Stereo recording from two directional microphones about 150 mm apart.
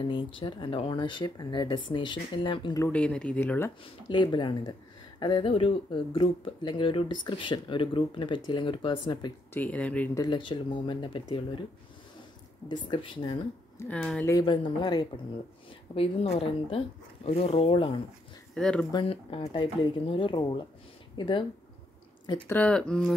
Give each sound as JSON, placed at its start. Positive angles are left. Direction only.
{"t": 0.1, "sound": "speech", "side_deg": 35}
{"t": 2.9, "sound": "speech", "side_deg": 5}
{"t": 3.8, "sound": "speech", "side_deg": 30}
{"t": 9.5, "sound": "speech", "side_deg": 10}
{"t": 10.1, "sound": "speech", "side_deg": 30}
{"t": 12.6, "sound": "speech", "side_deg": 30}
{"t": 13.7, "sound": "speech", "side_deg": 10}
{"t": 14.4, "sound": "speech", "side_deg": 35}
{"t": 15.9, "sound": "speech", "side_deg": 40}
{"t": 18.5, "sound": "speech", "side_deg": 5}
{"t": 18.9, "sound": "speech", "side_deg": 35}
{"t": 22.5, "sound": "speech", "side_deg": 10}